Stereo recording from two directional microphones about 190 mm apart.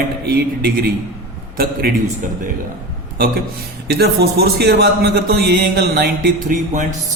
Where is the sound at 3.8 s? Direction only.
55° right (ahead or behind).